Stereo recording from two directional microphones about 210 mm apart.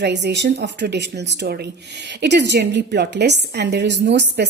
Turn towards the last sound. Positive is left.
turn(degrees=-55)  # may be behind; listen again after turning